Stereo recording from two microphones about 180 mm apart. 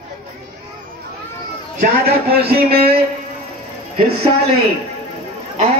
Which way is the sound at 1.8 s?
60° right (ahead or behind).